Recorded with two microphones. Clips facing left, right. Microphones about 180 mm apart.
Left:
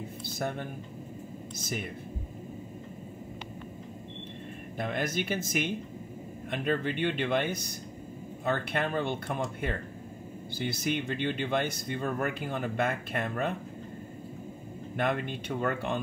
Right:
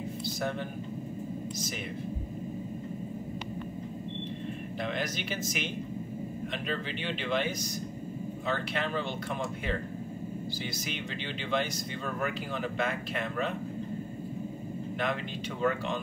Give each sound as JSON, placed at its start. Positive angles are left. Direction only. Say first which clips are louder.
{"t": 4.8, "sound": "speech", "louder": "left 4 dB", "side_deg": 50}
{"t": 15.6, "sound": "speech", "louder": "right 2 dB", "side_deg": 55}